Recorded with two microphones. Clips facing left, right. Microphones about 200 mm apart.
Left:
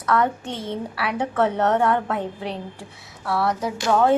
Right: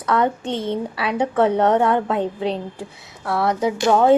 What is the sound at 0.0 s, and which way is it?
A woman's voice, 20° right (ahead or behind).